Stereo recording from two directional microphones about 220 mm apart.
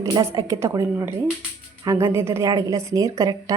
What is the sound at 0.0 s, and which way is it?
Speech, 15° right (ahead or behind).